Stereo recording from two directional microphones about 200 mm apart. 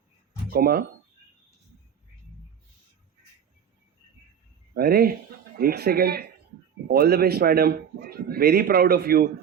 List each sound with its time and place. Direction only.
0.5 s speech: 50° right (ahead or behind)
4.7 s a man's voice: 50° right (ahead or behind)